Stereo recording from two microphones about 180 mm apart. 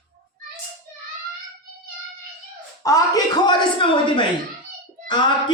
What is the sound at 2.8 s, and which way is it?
Speech, 20° left (ahead or behind).